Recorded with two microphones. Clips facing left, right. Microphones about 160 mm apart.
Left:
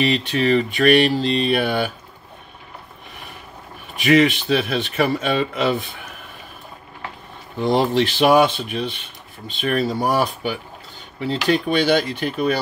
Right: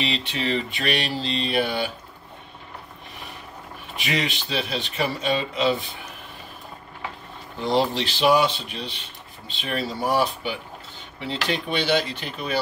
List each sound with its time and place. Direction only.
0.0 s speech: 50° left (ahead or behind)
3.9 s speech: 50° left (ahead or behind)
7.5 s speech: 50° left (ahead or behind)